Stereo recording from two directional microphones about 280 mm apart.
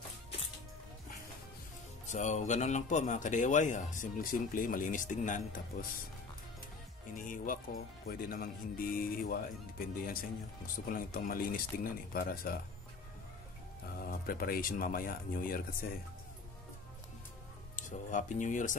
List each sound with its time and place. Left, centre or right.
2.0 s speech: left
7.2 s speech: left
14.0 s speech: left
17.7 s speech: left